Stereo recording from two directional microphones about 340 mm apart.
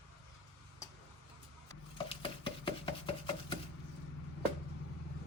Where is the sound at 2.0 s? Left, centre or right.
Centre.